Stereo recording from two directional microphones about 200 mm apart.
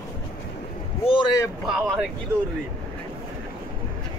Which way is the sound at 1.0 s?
25° left (ahead or behind).